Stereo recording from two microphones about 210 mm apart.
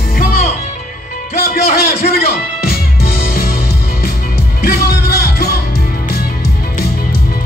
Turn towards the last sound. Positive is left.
turn(degrees=45)  # may be behind; listen again after turning